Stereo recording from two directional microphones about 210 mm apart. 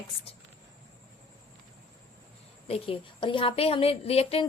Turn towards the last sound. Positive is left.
turn(degrees=30)  # may be behind; listen again after turning